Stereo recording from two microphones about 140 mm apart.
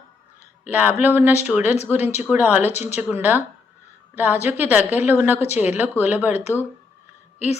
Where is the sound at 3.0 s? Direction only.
15° right (ahead or behind).